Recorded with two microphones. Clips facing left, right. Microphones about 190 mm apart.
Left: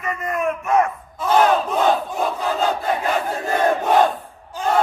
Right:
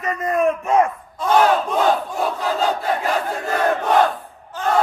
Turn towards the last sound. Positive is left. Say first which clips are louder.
# even
turn(degrees=10)  # may be behind; listen again after turning